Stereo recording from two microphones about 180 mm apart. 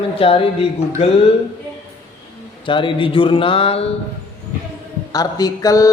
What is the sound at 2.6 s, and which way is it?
Speech, 30° left (ahead or behind).